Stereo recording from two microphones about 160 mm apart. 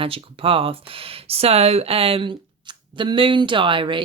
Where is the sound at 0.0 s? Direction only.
35° right (ahead or behind).